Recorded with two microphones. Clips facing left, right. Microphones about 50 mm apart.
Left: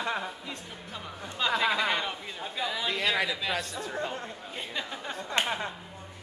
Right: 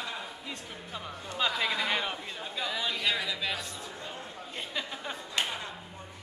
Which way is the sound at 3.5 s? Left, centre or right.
Left.